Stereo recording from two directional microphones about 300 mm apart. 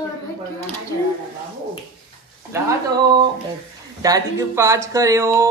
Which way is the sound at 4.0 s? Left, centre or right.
Centre.